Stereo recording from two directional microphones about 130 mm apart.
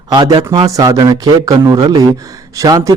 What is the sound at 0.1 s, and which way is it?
Speech, 35° right (ahead or behind).